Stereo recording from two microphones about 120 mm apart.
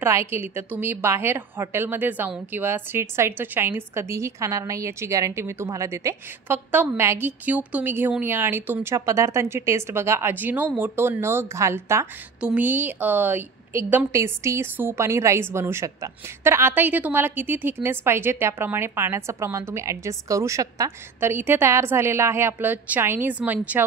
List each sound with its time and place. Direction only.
0.0 s a woman's voice: 20° right (ahead or behind)
12.4 s a woman's voice: 10° right (ahead or behind)